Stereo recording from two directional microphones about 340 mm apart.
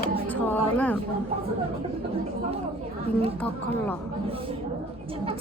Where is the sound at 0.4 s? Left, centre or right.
Centre.